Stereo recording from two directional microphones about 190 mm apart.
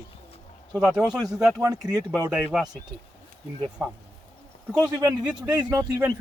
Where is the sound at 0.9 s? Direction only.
5° right (ahead or behind).